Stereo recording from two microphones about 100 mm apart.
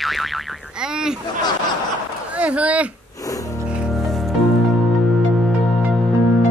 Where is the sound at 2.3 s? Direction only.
15° right (ahead or behind).